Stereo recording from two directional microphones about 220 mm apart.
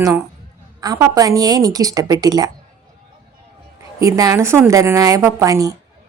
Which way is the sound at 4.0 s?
15° right (ahead or behind).